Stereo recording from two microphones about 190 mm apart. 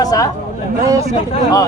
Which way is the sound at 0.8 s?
15° right (ahead or behind).